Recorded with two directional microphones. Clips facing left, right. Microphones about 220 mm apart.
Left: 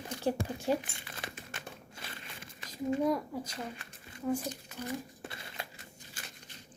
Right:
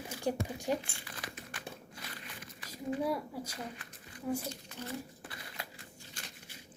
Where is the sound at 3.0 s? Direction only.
10° right (ahead or behind).